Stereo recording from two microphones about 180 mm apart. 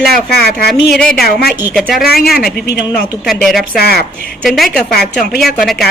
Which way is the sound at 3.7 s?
60° left (ahead or behind).